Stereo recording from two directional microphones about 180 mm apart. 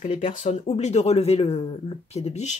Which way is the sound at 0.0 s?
40° left (ahead or behind).